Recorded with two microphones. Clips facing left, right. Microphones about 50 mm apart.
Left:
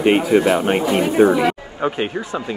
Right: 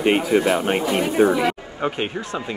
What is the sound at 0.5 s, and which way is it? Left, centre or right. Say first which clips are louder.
Speech: left 3 dB; left.